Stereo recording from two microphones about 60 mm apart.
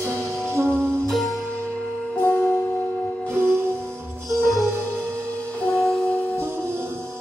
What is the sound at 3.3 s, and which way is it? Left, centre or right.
Music, right.